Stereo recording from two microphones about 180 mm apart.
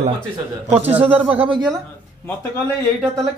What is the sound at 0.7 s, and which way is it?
Speech, 10° right (ahead or behind).